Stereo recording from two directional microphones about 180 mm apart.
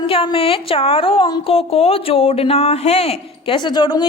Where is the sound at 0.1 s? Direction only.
30° left (ahead or behind).